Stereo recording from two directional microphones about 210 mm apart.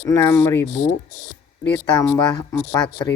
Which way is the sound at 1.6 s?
15° left (ahead or behind).